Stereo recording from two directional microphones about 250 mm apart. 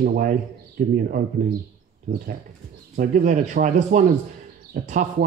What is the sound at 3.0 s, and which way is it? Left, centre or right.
Speech, right.